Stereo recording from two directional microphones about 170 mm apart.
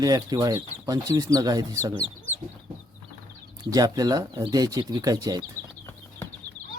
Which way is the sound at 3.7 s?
20° right (ahead or behind).